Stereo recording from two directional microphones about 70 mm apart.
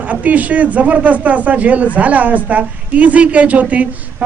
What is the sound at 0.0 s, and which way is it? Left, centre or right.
Speech, right.